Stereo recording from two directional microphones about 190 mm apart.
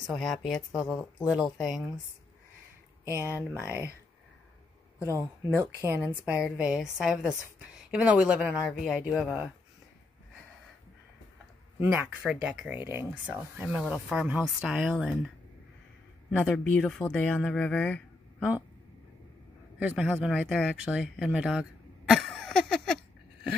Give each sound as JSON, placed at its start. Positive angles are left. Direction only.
{"t": 0.0, "sound": "a woman's voice", "side_deg": 0}
{"t": 3.2, "sound": "speech", "side_deg": -10}
{"t": 4.9, "sound": "a sound", "side_deg": -15}
{"t": 5.5, "sound": "a woman's voice", "side_deg": -15}
{"t": 12.3, "sound": "a woman's voice", "side_deg": -5}
{"t": 16.3, "sound": "a woman's voice", "side_deg": 5}
{"t": 19.8, "sound": "speech", "side_deg": -5}